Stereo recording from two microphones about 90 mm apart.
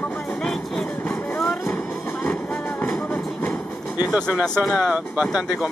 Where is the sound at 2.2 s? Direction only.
5° left (ahead or behind).